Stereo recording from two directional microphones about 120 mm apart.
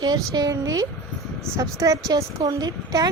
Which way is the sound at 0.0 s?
35° right (ahead or behind).